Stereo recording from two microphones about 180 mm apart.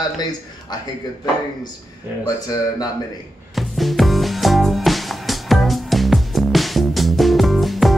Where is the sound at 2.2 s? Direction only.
20° left (ahead or behind).